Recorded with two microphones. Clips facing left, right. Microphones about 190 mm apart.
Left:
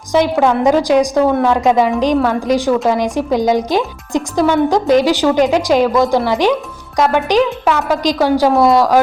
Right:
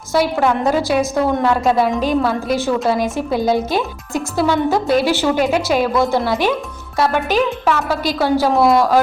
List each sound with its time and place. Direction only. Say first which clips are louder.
0.1 s a woman's voice: left 3 dB; 15° left (ahead or behind)